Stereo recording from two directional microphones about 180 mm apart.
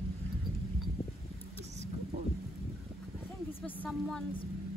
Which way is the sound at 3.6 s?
5° left (ahead or behind).